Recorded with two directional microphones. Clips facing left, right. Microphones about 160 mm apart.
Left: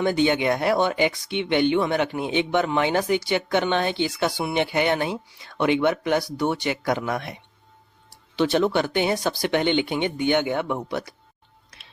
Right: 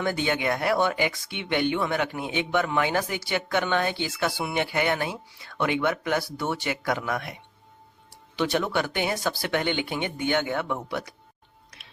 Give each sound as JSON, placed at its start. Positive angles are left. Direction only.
{"t": 0.0, "sound": "speech", "side_deg": 20}
{"t": 8.4, "sound": "speech", "side_deg": 30}